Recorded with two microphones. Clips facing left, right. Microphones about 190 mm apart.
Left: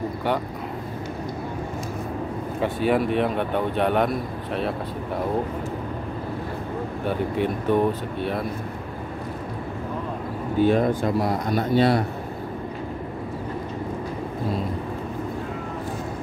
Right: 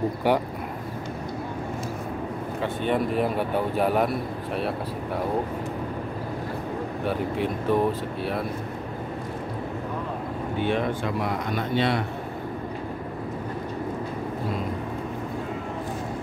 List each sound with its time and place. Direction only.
2.6 s a man's voice: 5° left (ahead or behind)
7.1 s a man's voice: centre (ahead or behind)
10.6 s speech: 40° left (ahead or behind)